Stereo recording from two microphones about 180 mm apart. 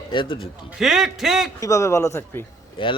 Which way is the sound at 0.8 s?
Centre (ahead or behind).